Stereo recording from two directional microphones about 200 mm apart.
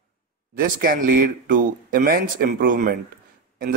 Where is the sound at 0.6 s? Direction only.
45° right (ahead or behind).